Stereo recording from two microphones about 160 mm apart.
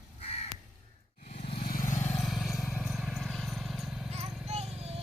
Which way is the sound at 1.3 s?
40° left (ahead or behind).